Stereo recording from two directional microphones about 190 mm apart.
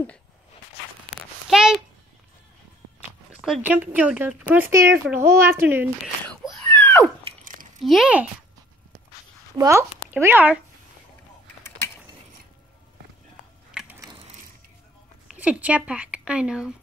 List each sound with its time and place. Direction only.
1.5 s a sound: 5° right (ahead or behind)
3.3 s a woman's voice: 5° right (ahead or behind)
6.4 s a sound: 5° left (ahead or behind)
7.8 s speech: centre (ahead or behind)
9.6 s a woman's voice: 15° right (ahead or behind)
13.7 s ratchet: 5° right (ahead or behind)
15.2 s a woman's voice: 5° right (ahead or behind)